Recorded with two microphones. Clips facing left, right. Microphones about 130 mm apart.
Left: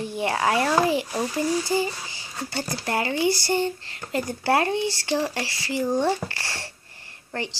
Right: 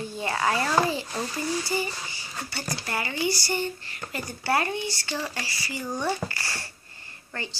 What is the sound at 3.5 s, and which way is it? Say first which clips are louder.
Speech: left 5 dB; 90° left.